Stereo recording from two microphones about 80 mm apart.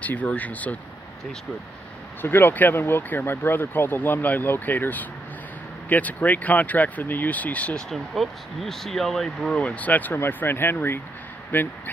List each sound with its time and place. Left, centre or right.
0.0 s speech: centre
2.2 s speech: left
7.9 s speech: centre
9.6 s speech: centre